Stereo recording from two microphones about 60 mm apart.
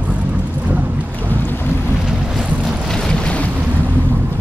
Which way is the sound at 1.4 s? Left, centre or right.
Left.